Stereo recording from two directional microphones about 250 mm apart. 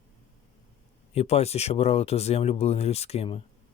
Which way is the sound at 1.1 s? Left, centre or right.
Left.